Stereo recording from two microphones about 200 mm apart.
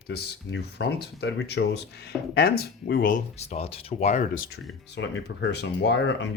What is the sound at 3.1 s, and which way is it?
Speech, 35° left (ahead or behind).